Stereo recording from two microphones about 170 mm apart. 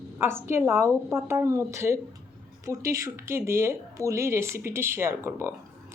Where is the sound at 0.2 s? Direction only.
15° right (ahead or behind).